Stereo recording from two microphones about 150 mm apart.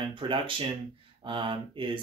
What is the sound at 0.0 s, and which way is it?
Speech, 35° right (ahead or behind).